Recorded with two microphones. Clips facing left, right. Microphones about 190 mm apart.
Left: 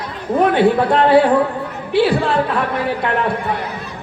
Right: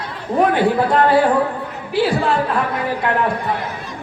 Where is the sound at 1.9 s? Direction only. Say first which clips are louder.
Left 3 dB; 65° left (ahead or behind).